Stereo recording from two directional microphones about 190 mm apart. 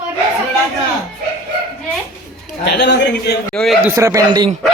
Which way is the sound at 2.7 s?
65° left (ahead or behind).